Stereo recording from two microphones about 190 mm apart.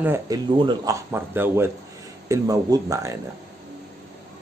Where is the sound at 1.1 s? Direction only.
10° right (ahead or behind).